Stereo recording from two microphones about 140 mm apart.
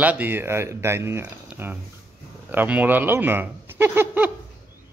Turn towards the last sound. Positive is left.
turn(degrees=-15)  # may be behind; listen again after turning